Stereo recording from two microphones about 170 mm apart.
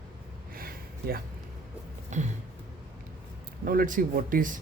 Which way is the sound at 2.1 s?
45° right (ahead or behind).